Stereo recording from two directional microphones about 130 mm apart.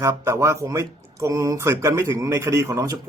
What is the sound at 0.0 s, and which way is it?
Speech, 20° right (ahead or behind).